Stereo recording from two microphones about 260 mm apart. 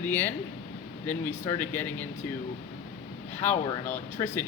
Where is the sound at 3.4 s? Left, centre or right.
Centre.